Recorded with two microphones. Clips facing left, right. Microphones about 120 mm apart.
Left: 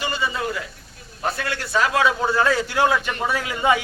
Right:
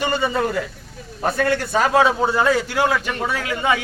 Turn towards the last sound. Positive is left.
turn(degrees=10)  # may be behind; listen again after turning